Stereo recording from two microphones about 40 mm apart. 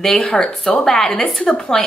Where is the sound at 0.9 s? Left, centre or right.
Centre.